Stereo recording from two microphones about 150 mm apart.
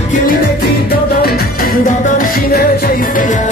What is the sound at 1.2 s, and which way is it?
Music, 85° left.